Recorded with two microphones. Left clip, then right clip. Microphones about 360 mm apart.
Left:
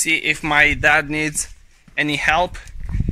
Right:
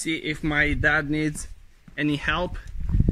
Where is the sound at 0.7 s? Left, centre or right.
Centre.